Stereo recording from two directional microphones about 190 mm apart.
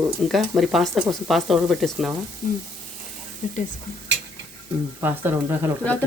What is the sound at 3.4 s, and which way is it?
Speech, 35° left (ahead or behind).